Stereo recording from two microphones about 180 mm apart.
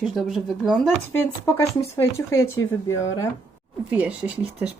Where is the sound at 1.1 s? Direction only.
10° left (ahead or behind).